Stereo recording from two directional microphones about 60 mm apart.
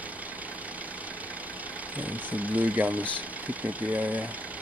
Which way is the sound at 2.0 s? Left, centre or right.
Right.